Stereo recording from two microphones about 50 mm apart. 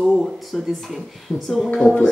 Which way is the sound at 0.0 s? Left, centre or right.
Centre.